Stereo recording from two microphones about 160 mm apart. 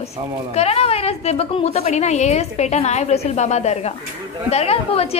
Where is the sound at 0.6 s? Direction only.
40° left (ahead or behind).